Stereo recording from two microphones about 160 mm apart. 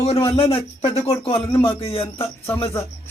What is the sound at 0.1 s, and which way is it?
A man's voice, 35° left (ahead or behind).